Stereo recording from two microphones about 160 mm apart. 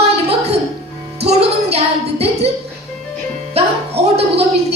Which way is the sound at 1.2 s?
40° right (ahead or behind).